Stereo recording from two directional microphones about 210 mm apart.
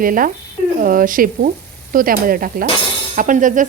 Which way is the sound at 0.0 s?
40° right (ahead or behind).